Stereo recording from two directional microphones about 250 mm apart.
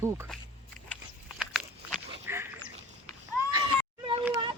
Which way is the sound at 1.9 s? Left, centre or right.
Centre.